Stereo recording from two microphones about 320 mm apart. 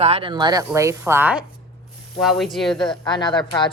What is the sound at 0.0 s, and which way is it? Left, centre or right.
Speech, centre.